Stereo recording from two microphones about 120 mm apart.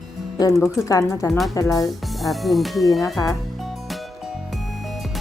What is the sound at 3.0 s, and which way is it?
Speech, 30° left (ahead or behind).